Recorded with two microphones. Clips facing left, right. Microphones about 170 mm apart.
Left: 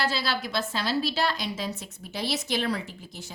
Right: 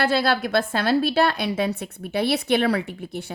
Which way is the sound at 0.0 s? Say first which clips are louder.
Right 8 dB; 55° right (ahead or behind).